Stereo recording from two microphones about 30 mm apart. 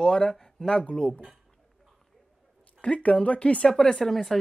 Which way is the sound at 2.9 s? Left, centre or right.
Left.